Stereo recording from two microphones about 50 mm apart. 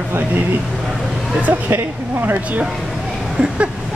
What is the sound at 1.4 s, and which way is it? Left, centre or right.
Speech, right.